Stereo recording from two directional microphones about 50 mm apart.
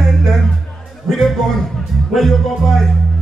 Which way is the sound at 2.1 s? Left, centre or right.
Centre.